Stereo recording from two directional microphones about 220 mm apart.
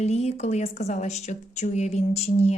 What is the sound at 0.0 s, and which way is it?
Speech, 30° left (ahead or behind).